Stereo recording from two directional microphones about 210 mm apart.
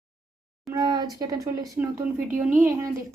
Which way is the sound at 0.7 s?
20° right (ahead or behind).